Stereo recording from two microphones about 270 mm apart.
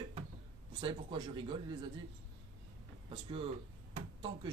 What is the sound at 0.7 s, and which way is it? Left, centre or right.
A man's voice, centre.